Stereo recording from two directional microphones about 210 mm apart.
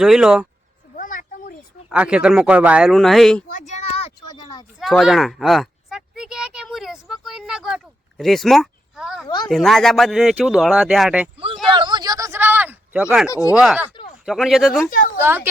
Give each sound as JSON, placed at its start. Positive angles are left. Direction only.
{"t": 0.0, "sound": "speech", "side_deg": 0}
{"t": 0.9, "sound": "a sound", "side_deg": 40}
{"t": 1.9, "sound": "speech", "side_deg": -5}
{"t": 3.5, "sound": "a sound", "side_deg": 35}
{"t": 4.8, "sound": "a sound", "side_deg": 0}
{"t": 8.2, "sound": "speech", "side_deg": 0}
{"t": 9.2, "sound": "speech", "side_deg": 20}
{"t": 9.5, "sound": "speech", "side_deg": 0}
{"t": 11.7, "sound": "a sound", "side_deg": -20}
{"t": 13.3, "sound": "speech", "side_deg": 15}
{"t": 13.6, "sound": "speech", "side_deg": -5}
{"t": 14.8, "sound": "a woman's voice", "side_deg": 40}
{"t": 15.2, "sound": "a woman's voice", "side_deg": -10}